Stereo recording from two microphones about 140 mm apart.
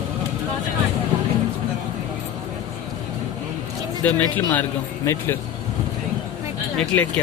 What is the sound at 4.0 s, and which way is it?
A man's voice, 10° left (ahead or behind).